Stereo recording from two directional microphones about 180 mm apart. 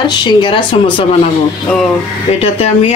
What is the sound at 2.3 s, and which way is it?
Speech, 35° left (ahead or behind).